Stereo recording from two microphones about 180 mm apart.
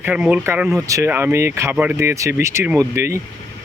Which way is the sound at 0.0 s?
10° right (ahead or behind).